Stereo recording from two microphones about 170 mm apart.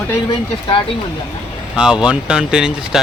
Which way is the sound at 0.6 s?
30° left (ahead or behind).